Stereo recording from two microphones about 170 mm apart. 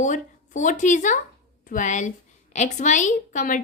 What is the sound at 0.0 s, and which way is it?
A woman's voice, 45° left (ahead or behind).